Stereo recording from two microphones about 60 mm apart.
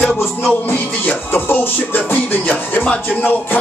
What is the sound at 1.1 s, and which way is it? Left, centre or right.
Music, left.